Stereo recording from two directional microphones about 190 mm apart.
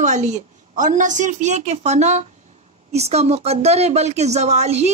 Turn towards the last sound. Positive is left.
turn(degrees=-35)  # may be behind; listen again after turning